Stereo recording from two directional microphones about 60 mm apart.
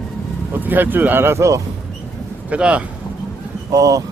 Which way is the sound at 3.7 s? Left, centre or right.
Right.